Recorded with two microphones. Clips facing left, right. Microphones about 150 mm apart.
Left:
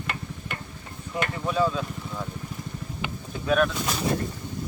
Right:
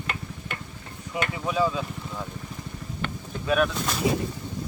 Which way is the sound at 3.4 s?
Centre (ahead or behind).